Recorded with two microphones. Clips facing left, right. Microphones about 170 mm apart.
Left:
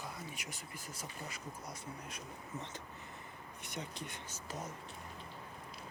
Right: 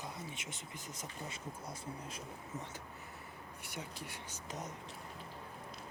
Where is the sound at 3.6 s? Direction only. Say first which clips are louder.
Left 2 dB; 10° right (ahead or behind).